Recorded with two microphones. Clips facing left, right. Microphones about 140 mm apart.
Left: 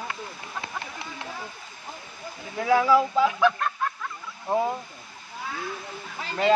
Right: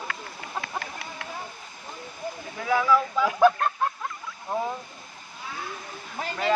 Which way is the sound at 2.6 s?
30° left (ahead or behind).